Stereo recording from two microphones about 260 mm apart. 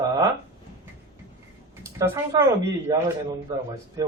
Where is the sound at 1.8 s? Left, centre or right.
Centre.